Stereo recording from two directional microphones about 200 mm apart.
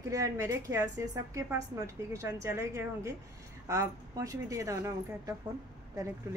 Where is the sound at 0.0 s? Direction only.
15° right (ahead or behind).